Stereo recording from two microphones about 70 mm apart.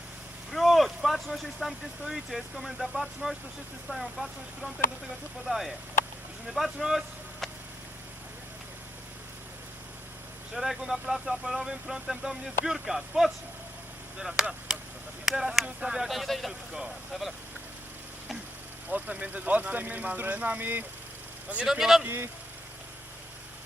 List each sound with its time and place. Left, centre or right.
0.5 s speech: centre
10.5 s speech: centre
14.7 s a sound: centre
15.2 s speech: centre
18.9 s speech: right
21.7 s speech: centre
22.0 s speech: right